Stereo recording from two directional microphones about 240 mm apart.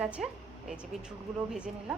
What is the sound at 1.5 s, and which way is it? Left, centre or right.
Speech, centre.